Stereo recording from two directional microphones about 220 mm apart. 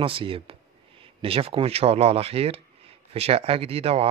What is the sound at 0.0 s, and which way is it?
Speech, 25° right (ahead or behind).